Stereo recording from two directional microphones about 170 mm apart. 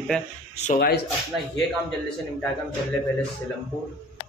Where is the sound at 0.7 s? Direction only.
65° left (ahead or behind).